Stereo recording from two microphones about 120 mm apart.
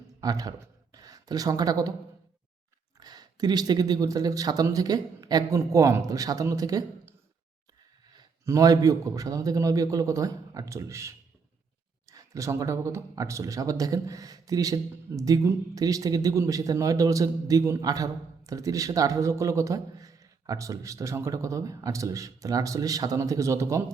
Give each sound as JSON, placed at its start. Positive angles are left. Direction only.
{"t": 0.2, "sound": "a man's voice", "side_deg": -30}
{"t": 3.0, "sound": "speech", "side_deg": -35}
{"t": 8.4, "sound": "a man's voice", "side_deg": -30}